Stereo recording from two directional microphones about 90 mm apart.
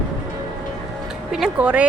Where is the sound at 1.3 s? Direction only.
10° right (ahead or behind).